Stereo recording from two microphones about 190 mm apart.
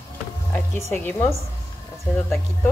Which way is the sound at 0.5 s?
10° left (ahead or behind).